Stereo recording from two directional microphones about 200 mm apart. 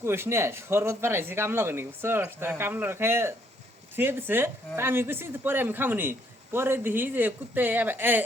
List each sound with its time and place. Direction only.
0.0 s speech: 10° right (ahead or behind)